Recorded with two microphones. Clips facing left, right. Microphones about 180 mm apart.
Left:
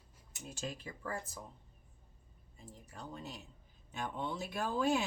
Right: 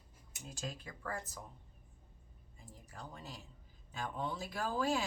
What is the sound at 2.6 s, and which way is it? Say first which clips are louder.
A woman's voice: left 2 dB; 25° left (ahead or behind).